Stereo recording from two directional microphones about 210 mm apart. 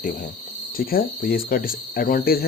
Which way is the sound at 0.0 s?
40° left (ahead or behind).